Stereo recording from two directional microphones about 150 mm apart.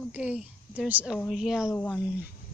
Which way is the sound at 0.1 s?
5° right (ahead or behind).